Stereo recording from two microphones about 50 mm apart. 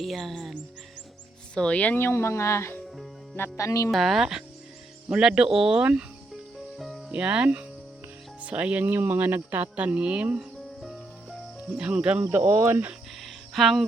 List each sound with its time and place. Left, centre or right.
0.0 s music: centre
1.5 s speech: centre
2.1 s speech: left
3.6 s speech: left
3.9 s speech: centre
5.1 s speech: centre
6.7 s music: centre
7.1 s speech: right
10.8 s music: centre
11.7 s speech: right
12.4 s speech: right
13.2 s a sound: centre